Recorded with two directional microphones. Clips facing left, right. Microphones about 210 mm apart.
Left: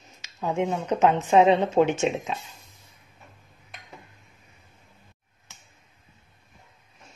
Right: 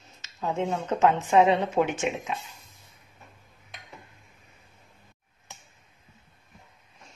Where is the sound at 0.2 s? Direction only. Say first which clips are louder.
Left 2 dB; 15° left (ahead or behind).